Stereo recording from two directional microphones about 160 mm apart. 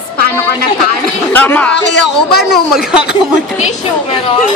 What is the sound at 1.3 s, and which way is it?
Speech, 10° left (ahead or behind).